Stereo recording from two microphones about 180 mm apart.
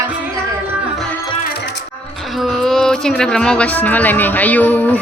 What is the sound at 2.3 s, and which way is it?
Speech, centre (ahead or behind).